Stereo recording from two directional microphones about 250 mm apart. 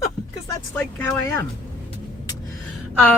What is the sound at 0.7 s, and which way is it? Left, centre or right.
Speech, centre.